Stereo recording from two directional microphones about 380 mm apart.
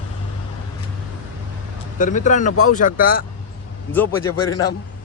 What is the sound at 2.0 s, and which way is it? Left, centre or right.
Speech, centre.